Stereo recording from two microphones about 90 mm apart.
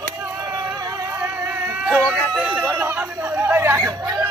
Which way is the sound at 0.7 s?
40° right (ahead or behind).